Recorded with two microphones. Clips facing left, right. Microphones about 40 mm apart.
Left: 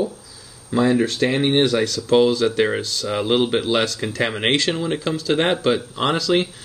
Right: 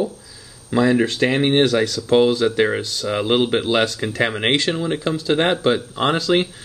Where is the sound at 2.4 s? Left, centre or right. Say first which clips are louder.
Right 1 dB; centre.